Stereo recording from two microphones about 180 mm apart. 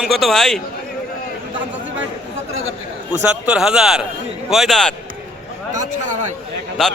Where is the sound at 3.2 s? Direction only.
5° right (ahead or behind).